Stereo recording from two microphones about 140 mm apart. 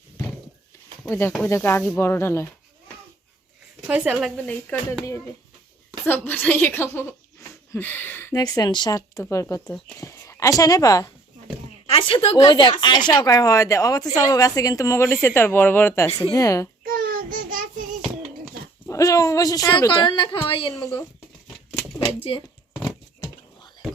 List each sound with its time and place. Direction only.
1.0 s a woman's voice: 15° left (ahead or behind)
3.8 s a woman's voice: 10° right (ahead or behind)
4.4 s a woman's voice: 10° left (ahead or behind)
6.1 s a woman's voice: 15° left (ahead or behind)
11.9 s a woman's voice: 40° left (ahead or behind); by 16.6 s 25° left (ahead or behind)
16.8 s child singing: 90° right
18.9 s a woman's voice: 25° left (ahead or behind)
19.9 s a woman's voice: 35° left (ahead or behind)
22.2 s a woman's voice: 40° left (ahead or behind)